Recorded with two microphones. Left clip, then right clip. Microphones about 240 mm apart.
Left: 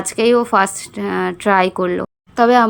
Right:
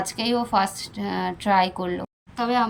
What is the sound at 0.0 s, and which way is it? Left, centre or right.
A woman's voice, centre.